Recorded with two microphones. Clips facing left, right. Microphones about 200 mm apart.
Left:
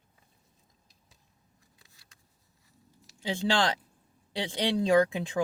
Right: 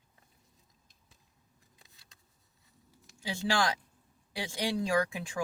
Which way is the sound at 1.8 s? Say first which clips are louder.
Even; 20° right (ahead or behind).